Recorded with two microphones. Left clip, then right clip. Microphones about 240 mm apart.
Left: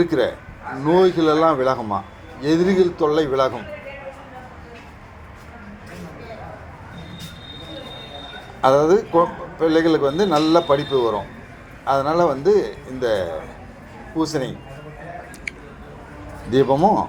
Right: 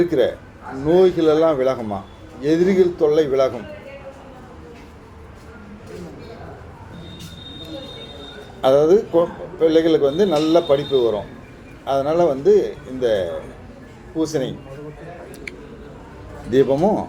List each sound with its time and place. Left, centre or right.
0.0 s a man's voice: left
8.6 s a man's voice: left
16.5 s speech: centre